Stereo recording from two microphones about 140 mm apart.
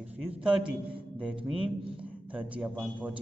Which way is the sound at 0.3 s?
10° right (ahead or behind).